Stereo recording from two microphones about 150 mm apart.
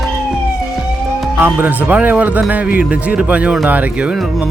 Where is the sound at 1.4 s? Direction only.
10° right (ahead or behind).